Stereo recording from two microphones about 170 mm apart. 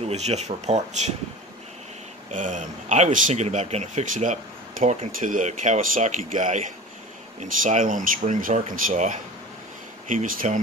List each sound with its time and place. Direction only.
0.0 s speech: 40° right (ahead or behind)
2.3 s speech: 45° right (ahead or behind)